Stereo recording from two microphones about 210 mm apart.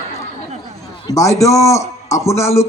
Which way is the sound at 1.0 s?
15° left (ahead or behind).